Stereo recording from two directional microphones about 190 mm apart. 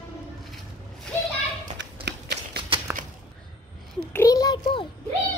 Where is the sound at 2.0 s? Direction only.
60° right (ahead or behind).